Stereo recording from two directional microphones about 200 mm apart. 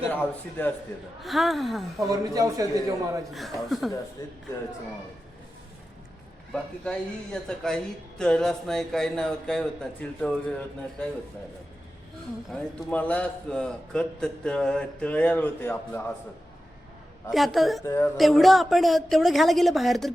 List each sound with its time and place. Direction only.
1.2 s a man's voice: centre (ahead or behind)
2.0 s a man's voice: 15° right (ahead or behind)
3.3 s a man's voice: centre (ahead or behind)
4.2 s a sound: 15° left (ahead or behind)
6.5 s a man's voice: 5° left (ahead or behind)
12.5 s a man's voice: 10° left (ahead or behind)
17.3 s a man's voice: centre (ahead or behind)
17.8 s a sound: 15° left (ahead or behind)
18.2 s a man's voice: centre (ahead or behind)